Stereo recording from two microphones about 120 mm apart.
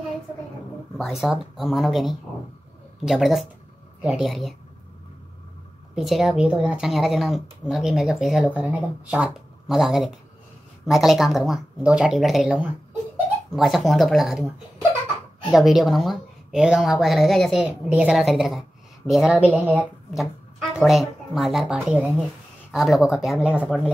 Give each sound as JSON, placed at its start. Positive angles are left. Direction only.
{"t": 0.9, "sound": "speech", "side_deg": 0}
{"t": 5.9, "sound": "speech", "side_deg": 0}
{"t": 12.4, "sound": "speech", "side_deg": -15}
{"t": 13.6, "sound": "speech", "side_deg": 0}
{"t": 15.5, "sound": "speech", "side_deg": 0}
{"t": 20.2, "sound": "speech", "side_deg": 0}